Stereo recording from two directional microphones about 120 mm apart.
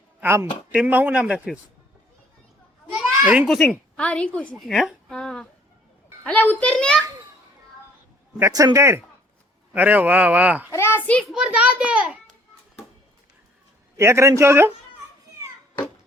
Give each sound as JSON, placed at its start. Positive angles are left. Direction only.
{"t": 0.2, "sound": "a woman's voice", "side_deg": -20}
{"t": 3.2, "sound": "a child's voice", "side_deg": -15}
{"t": 3.4, "sound": "a woman's voice", "side_deg": 0}
{"t": 8.4, "sound": "speech", "side_deg": -25}
{"t": 10.7, "sound": "a child's voice", "side_deg": 20}
{"t": 11.2, "sound": "speech", "side_deg": -5}
{"t": 13.9, "sound": "speech", "side_deg": -25}